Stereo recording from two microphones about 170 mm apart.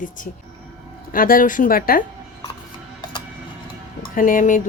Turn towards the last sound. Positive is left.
turn(degrees=50)  # may be behind; listen again after turning